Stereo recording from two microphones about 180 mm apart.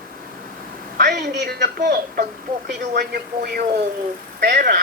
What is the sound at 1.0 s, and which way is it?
A woman's voice, 65° right (ahead or behind).